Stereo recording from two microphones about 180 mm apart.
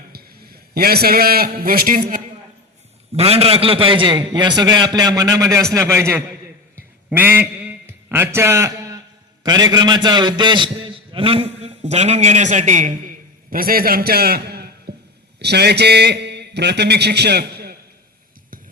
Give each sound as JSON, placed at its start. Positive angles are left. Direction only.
{"t": 0.1, "sound": "a man's voice", "side_deg": -60}
{"t": 3.1, "sound": "a man's voice", "side_deg": -35}
{"t": 13.5, "sound": "a man's voice", "side_deg": -55}